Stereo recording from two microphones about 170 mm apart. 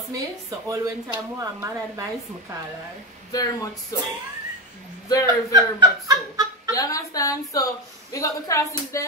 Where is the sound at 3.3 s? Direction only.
20° left (ahead or behind).